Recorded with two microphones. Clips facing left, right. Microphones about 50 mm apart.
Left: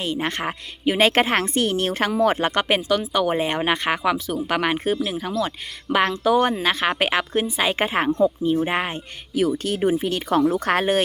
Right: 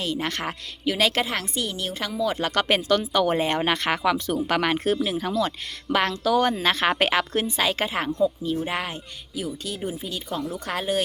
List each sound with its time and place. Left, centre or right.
0.0 s speech: left
2.4 s speech: left
2.6 s speech: centre
6.6 s a woman's voice: centre; by 9.0 s left
9.3 s speech: left
10.5 s speech: left